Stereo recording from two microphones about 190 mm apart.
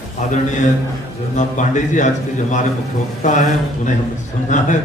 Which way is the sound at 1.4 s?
40° left (ahead or behind).